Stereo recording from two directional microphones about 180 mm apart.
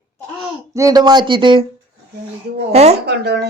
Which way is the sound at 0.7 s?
20° right (ahead or behind).